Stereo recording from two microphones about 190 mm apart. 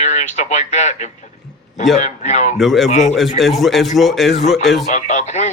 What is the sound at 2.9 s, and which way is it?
Speech, 40° left (ahead or behind).